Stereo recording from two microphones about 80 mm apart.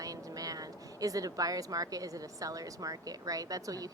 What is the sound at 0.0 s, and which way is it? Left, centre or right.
Speech, right.